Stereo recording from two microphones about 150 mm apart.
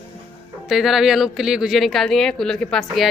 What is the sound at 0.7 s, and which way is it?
A woman's voice, centre (ahead or behind).